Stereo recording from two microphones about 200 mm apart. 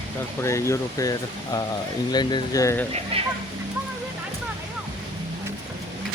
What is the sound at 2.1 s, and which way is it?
Speech, 20° left (ahead or behind).